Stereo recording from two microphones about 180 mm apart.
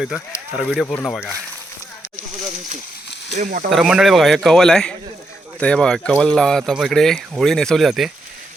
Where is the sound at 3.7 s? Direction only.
Centre (ahead or behind).